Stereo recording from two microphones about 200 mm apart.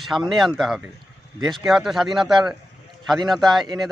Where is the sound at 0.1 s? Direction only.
Centre (ahead or behind).